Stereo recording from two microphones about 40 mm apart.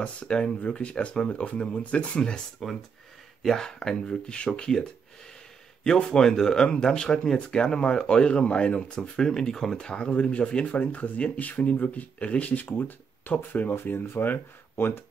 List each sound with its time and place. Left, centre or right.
0.0 s speech: left
3.4 s speech: centre
3.9 s speech: left
5.9 s speech: left
12.6 s speech: left
13.9 s speech: left
14.2 s speech: left